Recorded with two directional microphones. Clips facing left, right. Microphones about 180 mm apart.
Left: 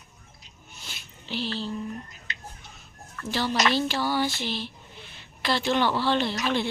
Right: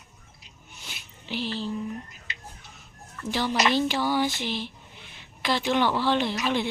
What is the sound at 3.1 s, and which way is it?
A woman's voice, 15° right (ahead or behind).